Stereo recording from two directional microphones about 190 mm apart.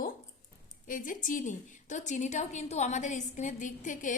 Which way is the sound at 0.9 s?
45° left (ahead or behind).